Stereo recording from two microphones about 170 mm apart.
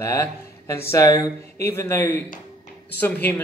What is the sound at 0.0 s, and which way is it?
Speech, 15° left (ahead or behind).